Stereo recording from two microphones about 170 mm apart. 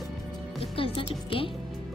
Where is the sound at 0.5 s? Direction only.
30° left (ahead or behind).